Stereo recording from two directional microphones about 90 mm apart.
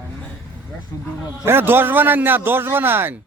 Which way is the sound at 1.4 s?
25° right (ahead or behind).